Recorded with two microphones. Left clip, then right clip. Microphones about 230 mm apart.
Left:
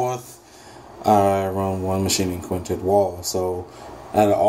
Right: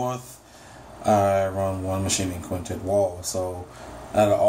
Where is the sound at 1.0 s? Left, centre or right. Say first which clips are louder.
Left 3 dB; left.